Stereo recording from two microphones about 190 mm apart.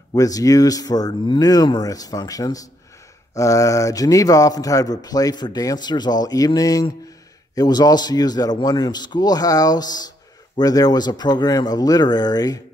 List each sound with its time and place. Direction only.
0.1 s speech: 20° left (ahead or behind)